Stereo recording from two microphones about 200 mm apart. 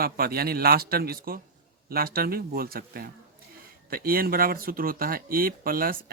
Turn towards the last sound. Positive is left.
turn(degrees=-45)  # may be behind; listen again after turning